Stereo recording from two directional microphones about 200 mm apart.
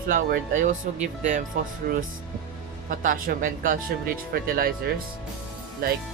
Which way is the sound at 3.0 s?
45° right (ahead or behind).